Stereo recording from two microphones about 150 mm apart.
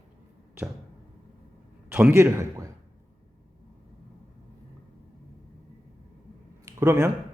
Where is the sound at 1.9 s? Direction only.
15° right (ahead or behind).